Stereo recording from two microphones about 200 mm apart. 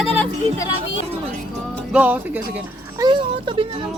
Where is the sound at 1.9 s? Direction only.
10° right (ahead or behind).